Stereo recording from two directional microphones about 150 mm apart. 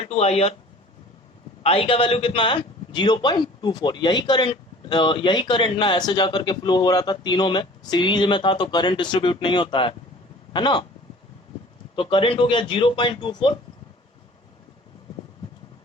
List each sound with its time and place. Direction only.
0.0 s speech: 45° left (ahead or behind)
1.6 s a man's voice: 40° left (ahead or behind)
10.5 s a sound: 30° left (ahead or behind)
11.9 s a man's voice: 35° left (ahead or behind)